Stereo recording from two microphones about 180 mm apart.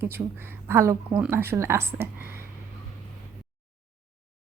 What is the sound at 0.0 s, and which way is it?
Speech, 10° right (ahead or behind).